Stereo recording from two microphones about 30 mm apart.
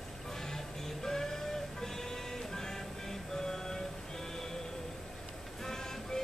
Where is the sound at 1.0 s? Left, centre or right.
Centre.